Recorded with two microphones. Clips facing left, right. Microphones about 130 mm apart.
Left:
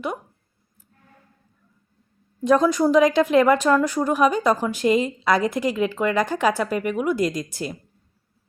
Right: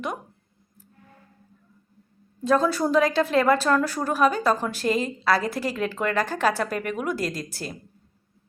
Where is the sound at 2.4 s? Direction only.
15° left (ahead or behind).